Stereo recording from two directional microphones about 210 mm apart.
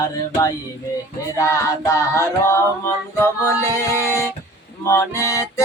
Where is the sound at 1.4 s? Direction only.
15° left (ahead or behind).